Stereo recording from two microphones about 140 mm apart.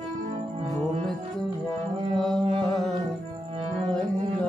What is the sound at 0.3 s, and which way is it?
Music, 55° right (ahead or behind).